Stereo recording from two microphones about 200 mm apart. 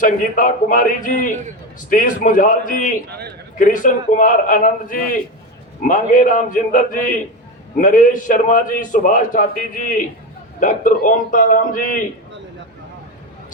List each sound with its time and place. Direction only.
0.0 s a man's voice: 40° left (ahead or behind)
3.1 s a man's voice: 55° right (ahead or behind)
3.6 s a man's voice: 40° left (ahead or behind)